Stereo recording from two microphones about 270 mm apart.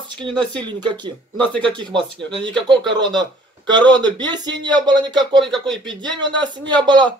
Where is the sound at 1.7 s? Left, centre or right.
Centre.